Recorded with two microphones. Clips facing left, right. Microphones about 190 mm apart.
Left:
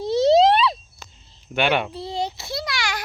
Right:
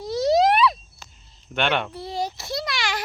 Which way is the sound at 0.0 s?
25° left (ahead or behind).